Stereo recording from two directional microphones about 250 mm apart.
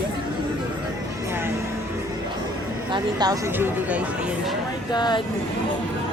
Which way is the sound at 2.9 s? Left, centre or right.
Centre.